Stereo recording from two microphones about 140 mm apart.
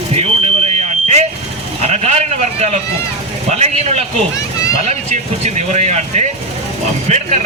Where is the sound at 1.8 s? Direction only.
50° right (ahead or behind).